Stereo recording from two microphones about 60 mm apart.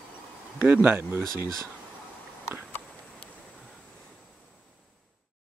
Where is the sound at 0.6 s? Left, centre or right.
Right.